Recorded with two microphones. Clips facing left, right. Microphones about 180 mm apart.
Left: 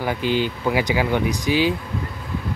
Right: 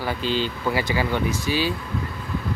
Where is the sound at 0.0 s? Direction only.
15° left (ahead or behind).